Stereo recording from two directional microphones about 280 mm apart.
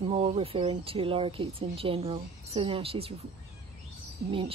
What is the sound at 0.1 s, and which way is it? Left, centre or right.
Speech, right.